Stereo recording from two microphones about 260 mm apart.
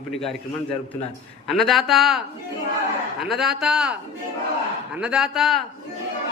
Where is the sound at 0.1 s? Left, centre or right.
Centre.